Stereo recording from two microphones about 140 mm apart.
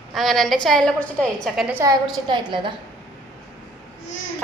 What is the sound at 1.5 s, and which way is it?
Speech, 10° right (ahead or behind).